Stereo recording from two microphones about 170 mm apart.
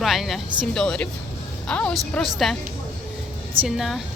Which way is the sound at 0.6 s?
5° left (ahead or behind).